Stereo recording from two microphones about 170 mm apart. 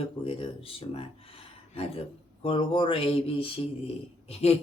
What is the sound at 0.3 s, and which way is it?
Speech, 35° left (ahead or behind).